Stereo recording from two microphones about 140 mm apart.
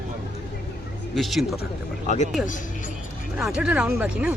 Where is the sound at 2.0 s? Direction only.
55° left (ahead or behind).